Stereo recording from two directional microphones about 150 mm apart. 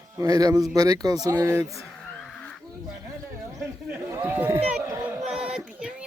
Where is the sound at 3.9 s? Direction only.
15° right (ahead or behind).